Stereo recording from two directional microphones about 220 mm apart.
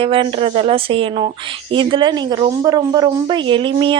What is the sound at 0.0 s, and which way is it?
Speech, 25° right (ahead or behind).